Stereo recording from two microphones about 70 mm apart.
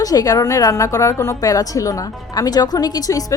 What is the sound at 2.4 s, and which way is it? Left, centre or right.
Speech, left.